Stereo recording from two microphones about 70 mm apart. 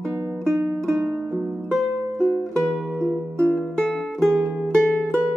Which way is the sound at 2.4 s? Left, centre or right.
Centre.